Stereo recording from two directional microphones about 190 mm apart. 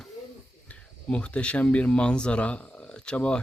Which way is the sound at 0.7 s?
5° left (ahead or behind).